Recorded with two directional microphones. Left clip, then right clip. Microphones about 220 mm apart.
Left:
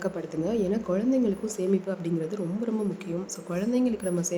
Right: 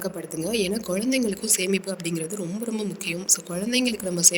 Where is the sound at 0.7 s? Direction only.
Centre (ahead or behind).